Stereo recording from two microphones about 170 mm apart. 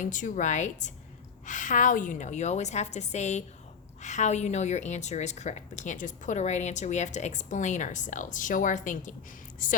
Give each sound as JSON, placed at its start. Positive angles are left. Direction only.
{"t": 0.0, "sound": "a woman's voice", "side_deg": 50}